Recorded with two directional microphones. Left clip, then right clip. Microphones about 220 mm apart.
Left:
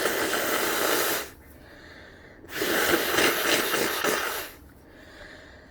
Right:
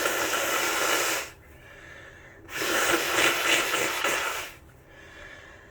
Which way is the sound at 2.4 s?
45° left (ahead or behind).